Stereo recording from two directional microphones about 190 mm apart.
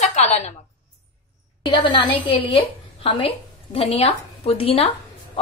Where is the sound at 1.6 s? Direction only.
25° left (ahead or behind).